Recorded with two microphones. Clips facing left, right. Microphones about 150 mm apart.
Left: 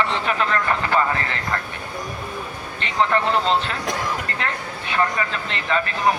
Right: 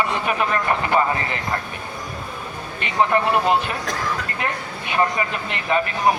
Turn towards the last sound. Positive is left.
turn(degrees=-15)  # may be behind; listen again after turning